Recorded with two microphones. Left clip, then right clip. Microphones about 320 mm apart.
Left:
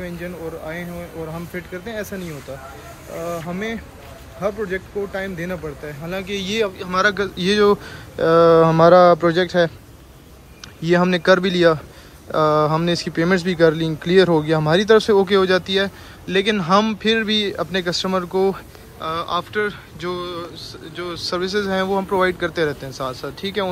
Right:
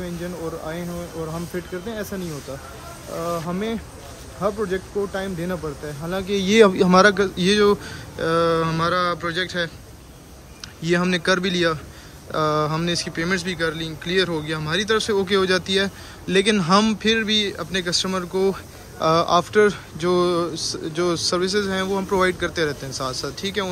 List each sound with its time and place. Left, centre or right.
0.0 s speech: centre
3.4 s speech: centre
10.8 s speech: centre